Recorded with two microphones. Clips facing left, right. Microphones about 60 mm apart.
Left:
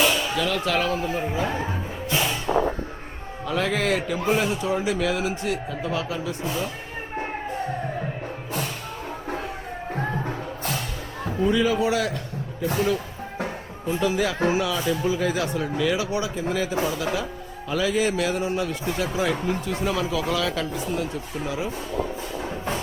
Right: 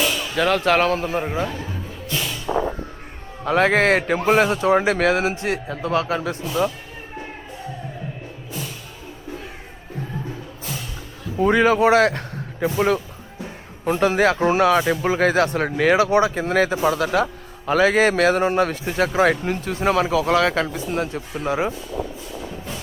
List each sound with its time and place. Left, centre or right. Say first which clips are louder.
0.0 s a sound: left 1 dB; centre
0.3 s a man's voice: right 6 dB; right
1.2 s a man's voice: right 2 dB; right
1.5 s music: left 3 dB; left
3.4 s a man's voice: right 7 dB; right
9.9 s music: left 2 dB; left
11.3 s a man's voice: right 5 dB; right
13.8 s a man's voice: right 6 dB; right